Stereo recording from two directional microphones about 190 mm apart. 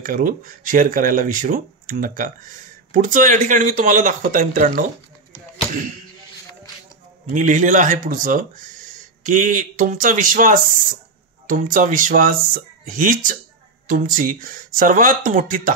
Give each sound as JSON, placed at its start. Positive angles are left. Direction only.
{"t": 0.0, "sound": "speech", "side_deg": -45}
{"t": 5.3, "sound": "a sound", "side_deg": -45}
{"t": 7.3, "sound": "speech", "side_deg": -40}